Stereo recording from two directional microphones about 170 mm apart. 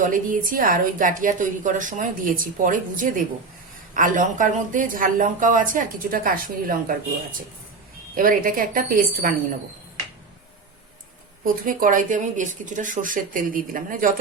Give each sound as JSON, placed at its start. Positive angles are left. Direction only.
{"t": 0.0, "sound": "a woman's voice", "side_deg": -50}
{"t": 8.1, "sound": "a woman's voice", "side_deg": -55}
{"t": 11.4, "sound": "a woman's voice", "side_deg": -55}